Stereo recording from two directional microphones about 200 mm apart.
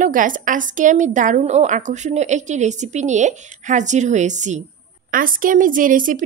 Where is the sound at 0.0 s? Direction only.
40° right (ahead or behind).